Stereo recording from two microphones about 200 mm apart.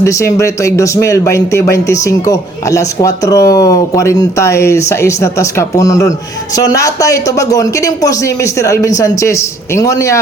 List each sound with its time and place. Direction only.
0.0 s speech: 15° left (ahead or behind)